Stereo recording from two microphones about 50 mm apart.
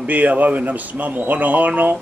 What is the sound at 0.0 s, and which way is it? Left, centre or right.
Speech, right.